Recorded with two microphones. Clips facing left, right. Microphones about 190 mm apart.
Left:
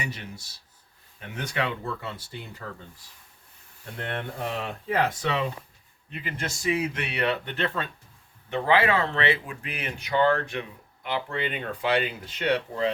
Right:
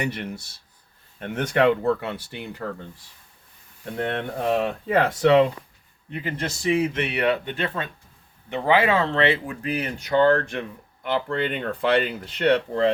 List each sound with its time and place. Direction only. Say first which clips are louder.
0.0 s speech: right 8 dB; 60° right (ahead or behind)
3.9 s speech: right 6 dB; 60° right (ahead or behind)
6.1 s speech: right 5 dB; 35° right (ahead or behind); by 8.8 s 20° right (ahead or behind)
9.5 s speech: right 8 dB; 35° right (ahead or behind); by 12.9 s 60° right (ahead or behind)